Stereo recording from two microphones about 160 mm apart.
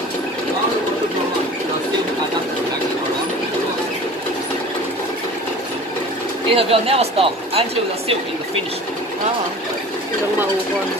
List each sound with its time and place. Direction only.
6.5 s speech: 35° right (ahead or behind)